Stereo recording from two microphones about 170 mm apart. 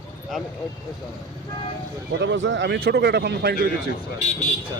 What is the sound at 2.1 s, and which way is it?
A man's voice, 90° right.